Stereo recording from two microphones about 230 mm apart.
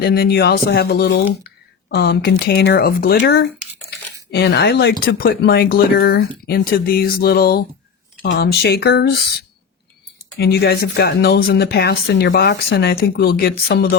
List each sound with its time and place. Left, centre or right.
0.0 s speech: left
10.3 s speech: left